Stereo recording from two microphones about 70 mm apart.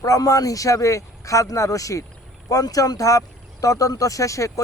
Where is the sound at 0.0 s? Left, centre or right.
Left.